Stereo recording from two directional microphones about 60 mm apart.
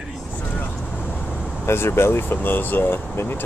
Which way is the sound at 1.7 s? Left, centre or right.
Left.